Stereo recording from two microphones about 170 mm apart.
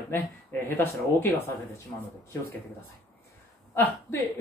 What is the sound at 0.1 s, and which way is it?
Speech, 10° left (ahead or behind).